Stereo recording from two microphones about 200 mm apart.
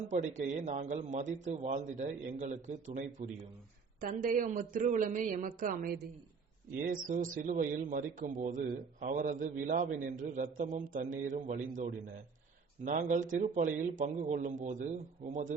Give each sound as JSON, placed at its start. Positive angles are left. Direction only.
{"t": 0.1, "sound": "speech", "side_deg": -35}